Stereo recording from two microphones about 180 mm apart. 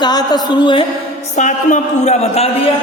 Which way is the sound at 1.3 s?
45° left (ahead or behind).